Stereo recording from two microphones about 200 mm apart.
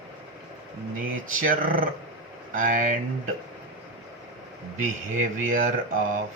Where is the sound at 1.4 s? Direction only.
45° right (ahead or behind).